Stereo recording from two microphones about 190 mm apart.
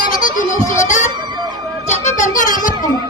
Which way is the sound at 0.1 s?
45° left (ahead or behind).